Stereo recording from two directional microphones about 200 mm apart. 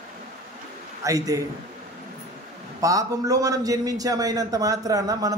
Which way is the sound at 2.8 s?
15° right (ahead or behind).